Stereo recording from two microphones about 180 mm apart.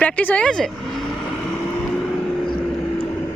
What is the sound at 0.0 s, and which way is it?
Speech, 10° left (ahead or behind).